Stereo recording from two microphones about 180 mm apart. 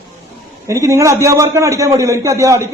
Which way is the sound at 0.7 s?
15° right (ahead or behind).